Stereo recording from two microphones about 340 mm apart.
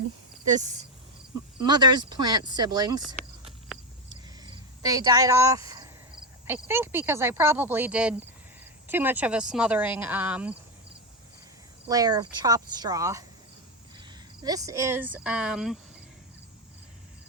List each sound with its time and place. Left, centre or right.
0.4 s speech: right
4.1 s cricket: centre
6.5 s speech: centre
11.9 s speech: centre
14.4 s speech: centre